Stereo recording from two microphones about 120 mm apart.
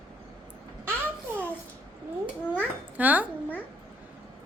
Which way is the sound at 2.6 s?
15° right (ahead or behind).